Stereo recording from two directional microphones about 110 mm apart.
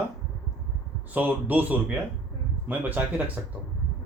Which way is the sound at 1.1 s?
15° right (ahead or behind).